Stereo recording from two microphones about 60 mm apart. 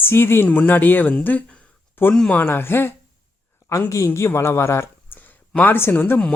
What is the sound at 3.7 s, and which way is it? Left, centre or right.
Speech, left.